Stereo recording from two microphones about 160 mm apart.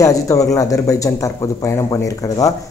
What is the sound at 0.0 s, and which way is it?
Speech, 20° left (ahead or behind).